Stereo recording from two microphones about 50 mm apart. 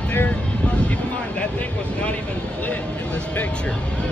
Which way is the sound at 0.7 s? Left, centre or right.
Left.